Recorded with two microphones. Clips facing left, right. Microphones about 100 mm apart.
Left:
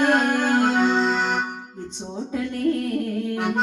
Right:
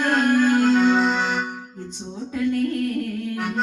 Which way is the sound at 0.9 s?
Centre (ahead or behind).